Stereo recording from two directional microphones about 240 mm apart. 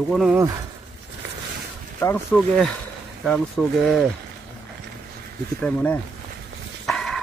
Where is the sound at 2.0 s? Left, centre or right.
Centre.